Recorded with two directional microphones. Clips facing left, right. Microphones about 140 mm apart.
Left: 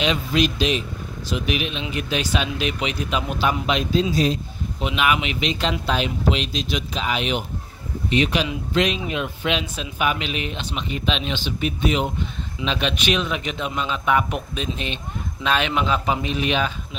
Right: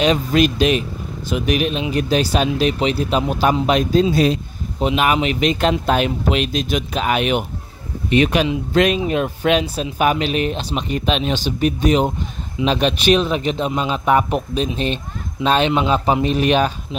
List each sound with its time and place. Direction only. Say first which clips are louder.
0.0 s speech: right 5 dB; 45° right (ahead or behind)
4.1 s speech: right 5 dB; 65° right (ahead or behind)
4.7 s speech: right 5 dB; 40° right (ahead or behind)